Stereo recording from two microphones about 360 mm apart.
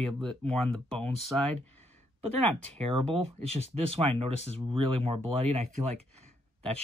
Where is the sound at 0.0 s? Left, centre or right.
Centre.